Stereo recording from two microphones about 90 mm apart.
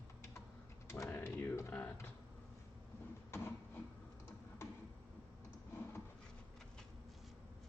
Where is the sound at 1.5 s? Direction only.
20° left (ahead or behind).